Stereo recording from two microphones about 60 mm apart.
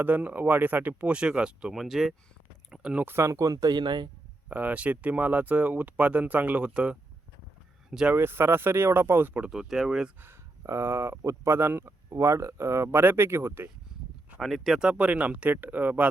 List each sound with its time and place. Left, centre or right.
0.0 s speech: right
1.7 s speech: centre
2.6 s a sound: centre
3.0 s speech: right
3.2 s speech: right
4.4 s speech: right
8.1 s speech: right
9.4 s speech: centre
10.6 s speech: right
12.1 s speech: right
14.4 s speech: centre
14.8 s speech: centre